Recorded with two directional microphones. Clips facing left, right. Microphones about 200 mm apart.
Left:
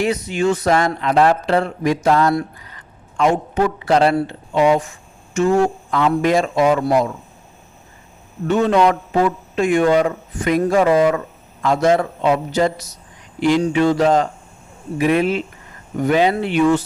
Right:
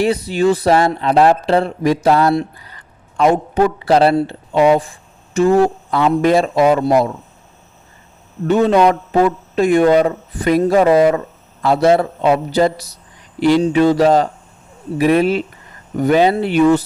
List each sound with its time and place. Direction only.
0.0 s speech: 35° right (ahead or behind)
4.1 s speech: 25° right (ahead or behind)
4.5 s speech: 35° right (ahead or behind)
8.4 s speech: 35° right (ahead or behind)